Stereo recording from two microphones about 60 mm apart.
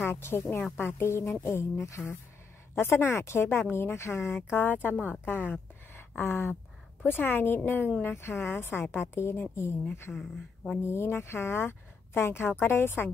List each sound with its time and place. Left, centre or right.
0.0 s speech: left
4.5 s speech: left
10.1 s speech: centre
10.9 s speech: left